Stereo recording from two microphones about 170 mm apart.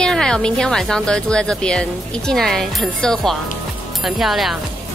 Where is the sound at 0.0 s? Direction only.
5° left (ahead or behind).